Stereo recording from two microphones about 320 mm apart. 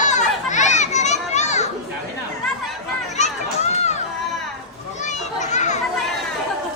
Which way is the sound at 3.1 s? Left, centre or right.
Left.